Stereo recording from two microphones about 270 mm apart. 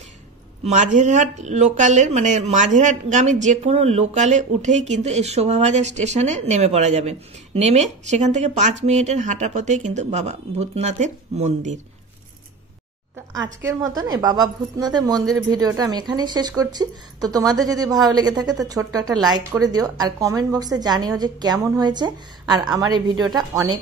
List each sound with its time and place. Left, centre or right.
0.7 s speech: right
13.3 s speech: centre